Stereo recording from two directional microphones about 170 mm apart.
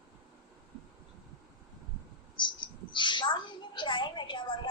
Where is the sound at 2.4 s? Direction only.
25° left (ahead or behind).